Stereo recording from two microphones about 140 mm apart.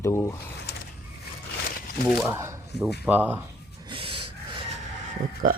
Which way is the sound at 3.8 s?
40° right (ahead or behind).